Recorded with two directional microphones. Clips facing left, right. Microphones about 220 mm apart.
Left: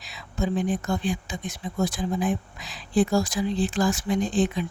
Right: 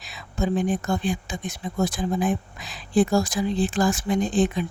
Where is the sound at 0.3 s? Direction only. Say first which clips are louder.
Right 2 dB; 50° right (ahead or behind).